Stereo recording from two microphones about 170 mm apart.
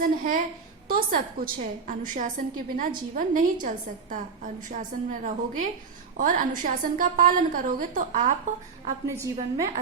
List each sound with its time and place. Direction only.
0.0 s a woman's voice: 55° right (ahead or behind)
9.0 s a woman's voice: 15° right (ahead or behind)